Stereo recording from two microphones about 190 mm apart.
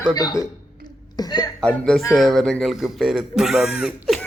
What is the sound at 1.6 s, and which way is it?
Speech, 5° left (ahead or behind).